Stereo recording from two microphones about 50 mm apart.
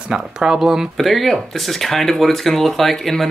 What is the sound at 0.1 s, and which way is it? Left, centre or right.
Speech, centre.